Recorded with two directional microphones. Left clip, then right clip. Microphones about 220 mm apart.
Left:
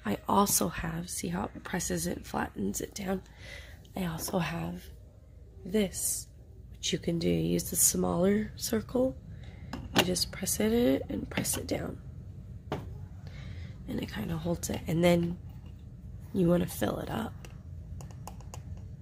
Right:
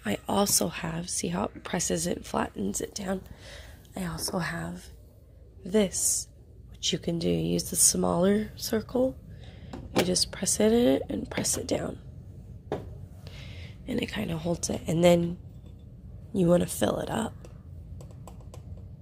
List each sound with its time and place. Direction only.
0.0 s speech: 10° left (ahead or behind)
5.6 s speech: centre (ahead or behind)
8.5 s speech: 15° left (ahead or behind)
10.0 s speech: centre (ahead or behind)
13.2 s a sound: 5° right (ahead or behind)
14.5 s speech: centre (ahead or behind)
16.3 s speech: centre (ahead or behind)